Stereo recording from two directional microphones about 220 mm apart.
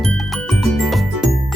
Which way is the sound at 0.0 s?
Centre (ahead or behind).